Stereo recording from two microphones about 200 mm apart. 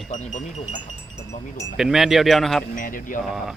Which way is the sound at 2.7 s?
45° left (ahead or behind).